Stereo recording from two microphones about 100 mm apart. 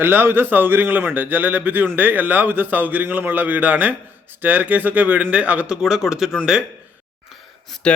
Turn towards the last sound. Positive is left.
turn(degrees=0)  # may be behind; listen again after turning